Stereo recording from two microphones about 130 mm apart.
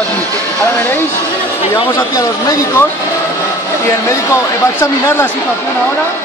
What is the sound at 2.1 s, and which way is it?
Speech, 25° left (ahead or behind).